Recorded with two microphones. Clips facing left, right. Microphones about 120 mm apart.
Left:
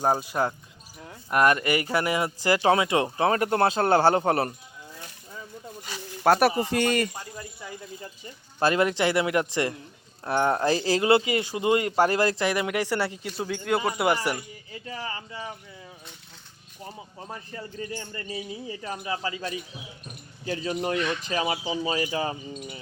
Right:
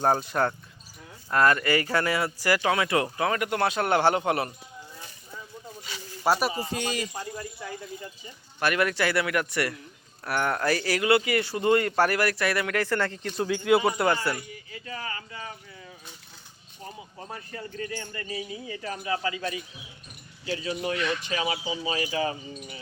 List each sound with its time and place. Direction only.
0.0 s speech: 10° left (ahead or behind)
1.3 s speech: 20° left (ahead or behind); by 4.5 s 35° left (ahead or behind)
5.8 s snake: 50° left (ahead or behind)
6.6 s speech: 65° left (ahead or behind)
8.5 s speech: 25° left (ahead or behind)
13.3 s speech: centre (ahead or behind)
14.0 s speech: 15° left (ahead or behind)
14.3 s speech: 30° left (ahead or behind)
18.7 s speech: 25° left (ahead or behind)
20.6 s speech: 40° left (ahead or behind)